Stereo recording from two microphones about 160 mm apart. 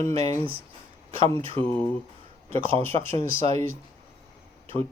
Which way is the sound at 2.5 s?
35° right (ahead or behind).